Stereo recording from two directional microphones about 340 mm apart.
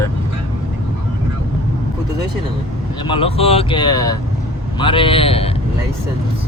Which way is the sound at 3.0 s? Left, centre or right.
Centre.